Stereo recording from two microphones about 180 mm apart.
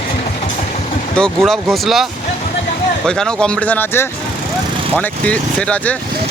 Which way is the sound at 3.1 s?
5° left (ahead or behind).